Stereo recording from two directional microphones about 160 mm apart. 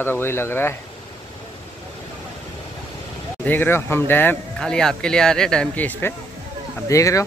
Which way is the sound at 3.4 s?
10° left (ahead or behind).